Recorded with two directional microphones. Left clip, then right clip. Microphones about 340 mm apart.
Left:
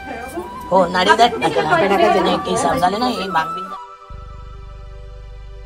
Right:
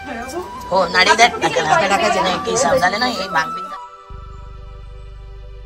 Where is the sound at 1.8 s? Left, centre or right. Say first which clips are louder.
Left 2 dB; left.